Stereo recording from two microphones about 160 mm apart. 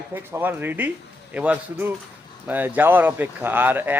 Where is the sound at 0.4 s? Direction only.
10° right (ahead or behind).